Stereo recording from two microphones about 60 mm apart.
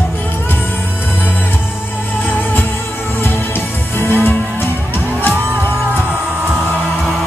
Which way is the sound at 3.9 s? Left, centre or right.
Left.